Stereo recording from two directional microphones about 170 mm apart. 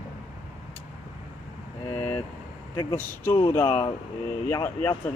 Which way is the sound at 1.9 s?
15° left (ahead or behind).